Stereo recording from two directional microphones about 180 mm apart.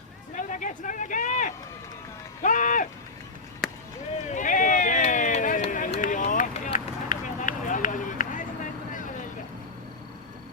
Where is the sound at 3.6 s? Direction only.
Centre (ahead or behind).